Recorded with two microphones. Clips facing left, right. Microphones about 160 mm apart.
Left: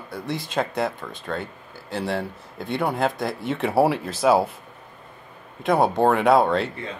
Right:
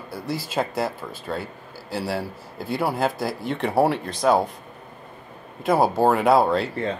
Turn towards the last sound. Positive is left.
turn(degrees=0)  # may be behind; listen again after turning